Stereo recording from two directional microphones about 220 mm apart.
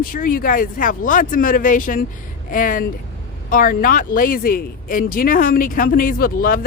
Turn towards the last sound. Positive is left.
turn(degrees=40)  # may be behind; listen again after turning